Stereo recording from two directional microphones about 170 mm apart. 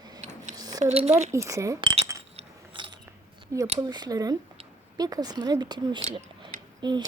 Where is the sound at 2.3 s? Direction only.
30° right (ahead or behind).